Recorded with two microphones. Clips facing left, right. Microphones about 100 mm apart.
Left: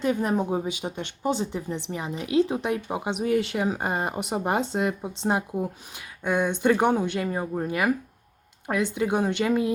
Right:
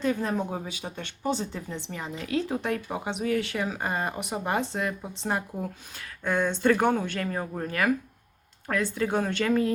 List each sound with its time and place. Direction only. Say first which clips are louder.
0.0 s speech: left 3 dB; 15° left (ahead or behind)